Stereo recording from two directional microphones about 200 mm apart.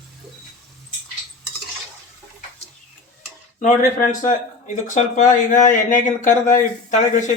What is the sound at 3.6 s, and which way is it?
Speech, 40° left (ahead or behind).